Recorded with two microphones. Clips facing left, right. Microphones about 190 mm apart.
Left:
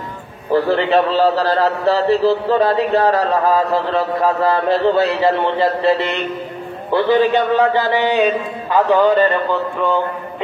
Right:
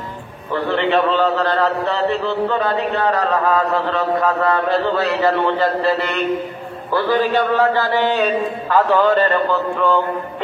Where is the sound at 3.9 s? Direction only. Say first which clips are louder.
Left 1 dB; 30° left (ahead or behind).